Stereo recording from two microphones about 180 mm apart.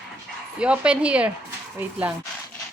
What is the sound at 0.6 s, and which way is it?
A woman's voice, 5° right (ahead or behind).